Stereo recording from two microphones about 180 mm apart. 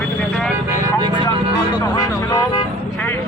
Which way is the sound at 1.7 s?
25° left (ahead or behind).